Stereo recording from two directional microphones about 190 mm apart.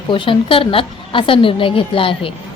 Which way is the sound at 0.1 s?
25° left (ahead or behind).